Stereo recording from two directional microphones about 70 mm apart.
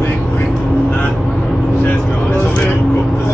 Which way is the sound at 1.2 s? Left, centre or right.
Centre.